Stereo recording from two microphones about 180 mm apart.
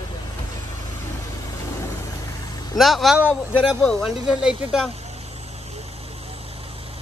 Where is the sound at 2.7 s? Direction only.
Centre (ahead or behind).